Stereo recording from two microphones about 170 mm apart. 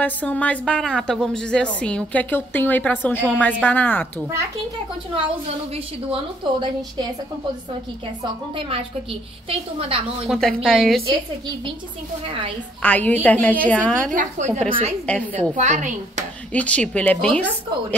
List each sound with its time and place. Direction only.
0.0 s a woman's voice: 10° left (ahead or behind)
6.4 s a woman's voice: 25° right (ahead or behind)
8.2 s a woman's voice: 35° right (ahead or behind)
10.2 s speech: centre (ahead or behind)
11.1 s a woman's voice: 30° right (ahead or behind)
12.8 s a woman's voice: 10° left (ahead or behind)
14.1 s a woman's voice: 45° right (ahead or behind)
14.7 s a woman's voice: 35° right (ahead or behind)
16.5 s a woman's voice: 5° left (ahead or behind)